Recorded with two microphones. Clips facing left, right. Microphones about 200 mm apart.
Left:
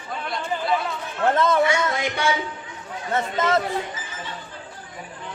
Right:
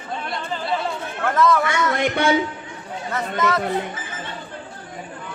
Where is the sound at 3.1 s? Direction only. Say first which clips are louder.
Left 1 dB; 25° left (ahead or behind).